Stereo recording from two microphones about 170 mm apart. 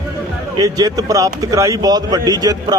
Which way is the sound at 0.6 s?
20° right (ahead or behind).